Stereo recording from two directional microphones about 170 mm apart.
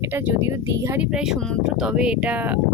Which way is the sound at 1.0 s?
5° right (ahead or behind).